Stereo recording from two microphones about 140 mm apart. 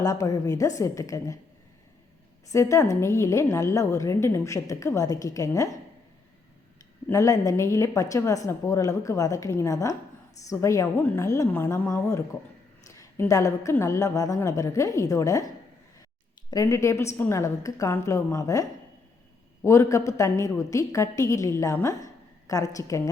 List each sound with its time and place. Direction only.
0.0 s a woman's voice: 25° left (ahead or behind)
2.5 s a woman's voice: 20° left (ahead or behind)
7.1 s a woman's voice: 20° left (ahead or behind)
16.5 s a woman's voice: 25° left (ahead or behind)